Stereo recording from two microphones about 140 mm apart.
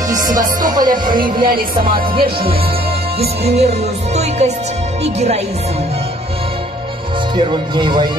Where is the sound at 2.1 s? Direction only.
40° right (ahead or behind).